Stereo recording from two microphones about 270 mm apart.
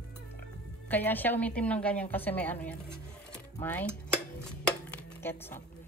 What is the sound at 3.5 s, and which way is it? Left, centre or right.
Dishes, centre.